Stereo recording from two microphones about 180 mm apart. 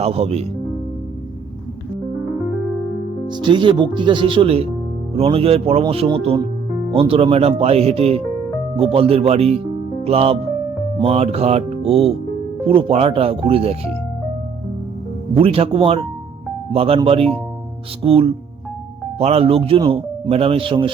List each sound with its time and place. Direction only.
0.0 s speech: 35° right (ahead or behind)
3.2 s speech: 25° right (ahead or behind)
15.4 s speech: 30° right (ahead or behind)